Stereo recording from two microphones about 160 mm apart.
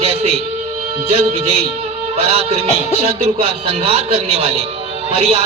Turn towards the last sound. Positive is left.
turn(degrees=-45)  # may be behind; listen again after turning